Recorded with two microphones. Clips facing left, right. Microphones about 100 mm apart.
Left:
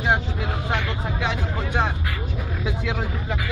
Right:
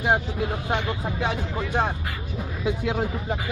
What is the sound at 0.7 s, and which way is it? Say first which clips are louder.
Speech: even; 75° left (ahead or behind).